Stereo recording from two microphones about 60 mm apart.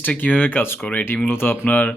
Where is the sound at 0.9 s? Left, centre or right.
Left.